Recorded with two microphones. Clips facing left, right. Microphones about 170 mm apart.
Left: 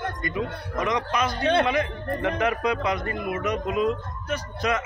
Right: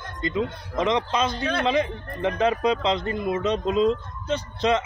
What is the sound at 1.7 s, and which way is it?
Speech, 25° right (ahead or behind).